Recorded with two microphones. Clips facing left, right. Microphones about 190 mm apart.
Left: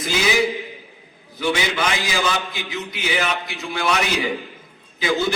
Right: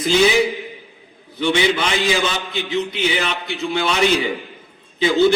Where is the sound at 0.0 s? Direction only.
30° right (ahead or behind).